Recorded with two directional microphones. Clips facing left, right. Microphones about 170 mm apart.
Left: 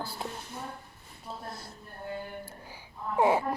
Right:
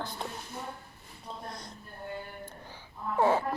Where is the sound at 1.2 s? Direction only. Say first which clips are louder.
Left 1 dB; 5° left (ahead or behind).